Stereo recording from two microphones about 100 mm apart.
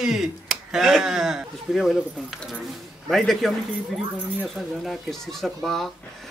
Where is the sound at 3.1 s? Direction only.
Centre (ahead or behind).